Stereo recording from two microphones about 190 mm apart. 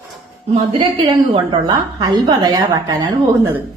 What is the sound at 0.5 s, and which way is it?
A woman's voice, 25° right (ahead or behind).